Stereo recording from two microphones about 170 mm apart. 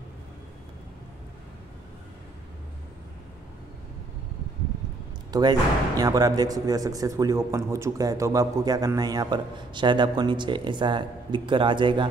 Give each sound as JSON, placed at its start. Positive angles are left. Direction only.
{"t": 5.3, "sound": "speech", "side_deg": -25}